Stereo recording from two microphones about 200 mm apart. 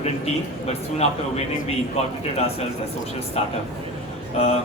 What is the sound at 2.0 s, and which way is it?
Speech, 30° left (ahead or behind).